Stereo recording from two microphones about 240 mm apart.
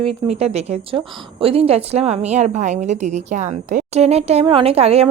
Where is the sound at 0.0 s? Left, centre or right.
Right.